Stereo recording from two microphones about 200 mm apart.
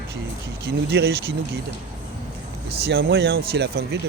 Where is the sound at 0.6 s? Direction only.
55° right (ahead or behind).